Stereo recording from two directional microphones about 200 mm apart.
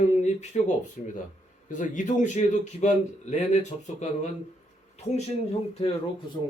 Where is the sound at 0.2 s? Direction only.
35° left (ahead or behind).